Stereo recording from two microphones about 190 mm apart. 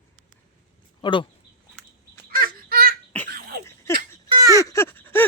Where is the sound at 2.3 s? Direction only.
50° right (ahead or behind).